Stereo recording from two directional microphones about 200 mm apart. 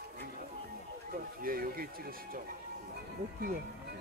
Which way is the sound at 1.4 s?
45° right (ahead or behind).